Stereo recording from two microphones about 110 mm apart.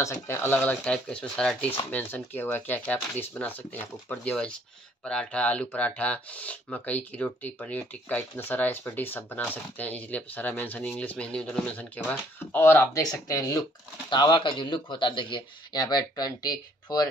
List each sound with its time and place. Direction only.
0.0 s speech: 20° left (ahead or behind)
14.1 s speech: 45° left (ahead or behind)